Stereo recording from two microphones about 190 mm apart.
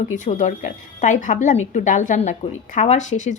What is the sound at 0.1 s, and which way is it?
Speech, 40° left (ahead or behind).